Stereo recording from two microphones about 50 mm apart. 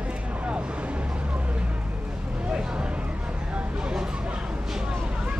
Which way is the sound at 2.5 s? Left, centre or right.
Right.